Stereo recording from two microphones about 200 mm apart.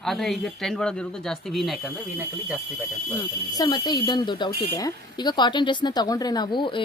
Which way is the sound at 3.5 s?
20° left (ahead or behind).